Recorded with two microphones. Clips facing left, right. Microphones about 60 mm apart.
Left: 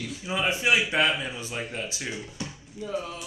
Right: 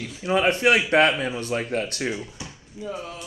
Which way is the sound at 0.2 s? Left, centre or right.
Right.